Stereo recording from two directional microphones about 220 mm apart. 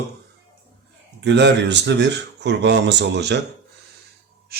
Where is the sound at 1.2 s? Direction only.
50° right (ahead or behind).